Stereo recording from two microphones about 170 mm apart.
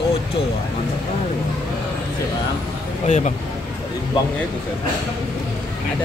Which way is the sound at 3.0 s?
45° left (ahead or behind).